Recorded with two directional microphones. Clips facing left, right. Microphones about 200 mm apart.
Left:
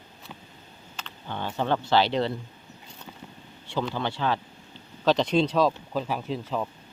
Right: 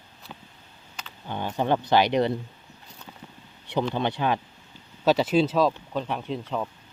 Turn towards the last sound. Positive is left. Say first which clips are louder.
# even
turn(degrees=0)  # may be behind; listen again after turning